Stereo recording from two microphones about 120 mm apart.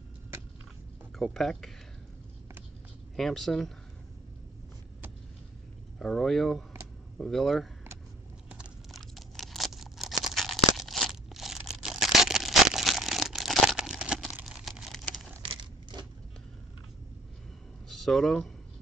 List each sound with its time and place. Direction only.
1.1 s speech: centre (ahead or behind)
3.2 s speech: centre (ahead or behind)
5.9 s speech: 5° left (ahead or behind)
8.5 s a sound: 5° right (ahead or behind)
10.8 s tearing: centre (ahead or behind)
15.4 s a sound: 45° right (ahead or behind)
17.8 s speech: centre (ahead or behind)